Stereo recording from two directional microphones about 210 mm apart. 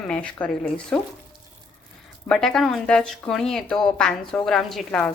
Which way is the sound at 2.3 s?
Centre (ahead or behind).